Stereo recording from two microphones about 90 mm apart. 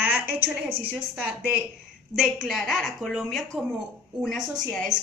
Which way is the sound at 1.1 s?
15° right (ahead or behind).